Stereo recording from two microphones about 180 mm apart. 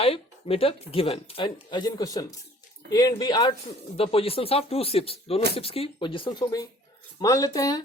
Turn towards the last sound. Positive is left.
turn(degrees=20)  # may be behind; listen again after turning